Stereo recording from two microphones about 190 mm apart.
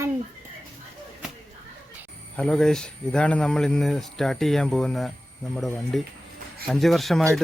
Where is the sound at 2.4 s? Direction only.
5° left (ahead or behind).